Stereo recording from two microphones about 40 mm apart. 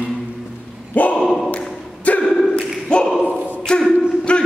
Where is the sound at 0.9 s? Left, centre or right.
Left.